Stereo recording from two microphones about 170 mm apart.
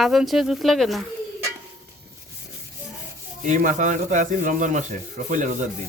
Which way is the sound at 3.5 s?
45° right (ahead or behind).